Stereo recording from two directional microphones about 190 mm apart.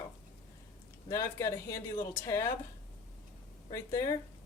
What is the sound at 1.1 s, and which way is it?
Speech, 15° left (ahead or behind).